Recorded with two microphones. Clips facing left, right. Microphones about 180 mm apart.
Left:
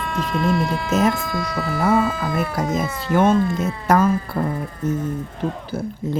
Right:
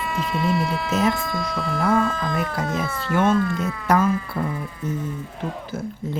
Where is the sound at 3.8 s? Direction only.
40° left (ahead or behind).